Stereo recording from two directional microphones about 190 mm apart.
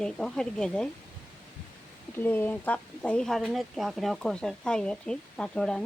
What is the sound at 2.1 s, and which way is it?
Speech, 10° left (ahead or behind).